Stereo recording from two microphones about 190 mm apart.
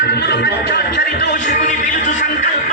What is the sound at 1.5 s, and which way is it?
Speech, 45° left (ahead or behind).